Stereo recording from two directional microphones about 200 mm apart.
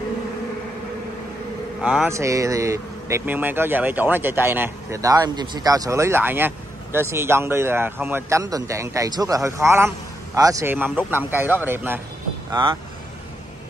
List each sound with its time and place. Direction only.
1.8 s speech: 5° right (ahead or behind)
12.4 s speech: 20° right (ahead or behind)